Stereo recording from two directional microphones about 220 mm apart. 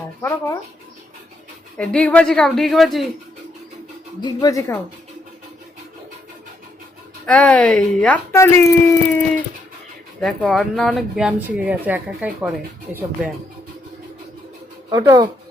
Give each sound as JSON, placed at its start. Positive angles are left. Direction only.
{"t": 0.2, "sound": "speech", "side_deg": 10}
{"t": 1.8, "sound": "speech", "side_deg": 5}
{"t": 4.2, "sound": "speech", "side_deg": 20}
{"t": 7.3, "sound": "speech", "side_deg": 5}
{"t": 10.2, "sound": "speech", "side_deg": 0}
{"t": 14.8, "sound": "speech", "side_deg": -15}